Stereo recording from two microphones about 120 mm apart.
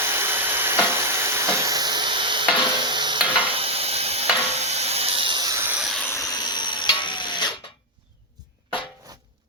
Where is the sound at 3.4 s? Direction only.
50° right (ahead or behind).